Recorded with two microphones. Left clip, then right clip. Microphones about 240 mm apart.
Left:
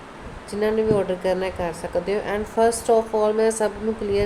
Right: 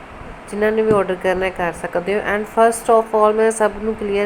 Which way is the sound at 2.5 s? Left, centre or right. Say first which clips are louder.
Right 5 dB; centre.